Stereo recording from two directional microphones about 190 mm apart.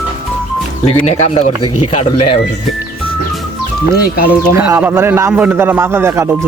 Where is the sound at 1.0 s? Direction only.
35° left (ahead or behind).